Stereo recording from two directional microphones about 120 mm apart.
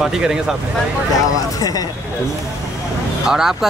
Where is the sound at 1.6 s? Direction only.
30° left (ahead or behind).